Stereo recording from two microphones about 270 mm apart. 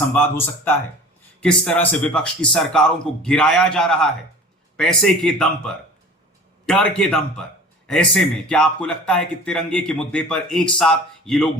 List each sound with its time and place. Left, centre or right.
0.1 s speech: centre